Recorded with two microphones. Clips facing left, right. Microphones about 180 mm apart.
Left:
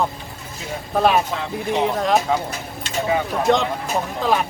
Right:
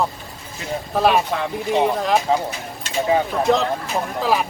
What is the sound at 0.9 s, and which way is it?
Speech, centre (ahead or behind).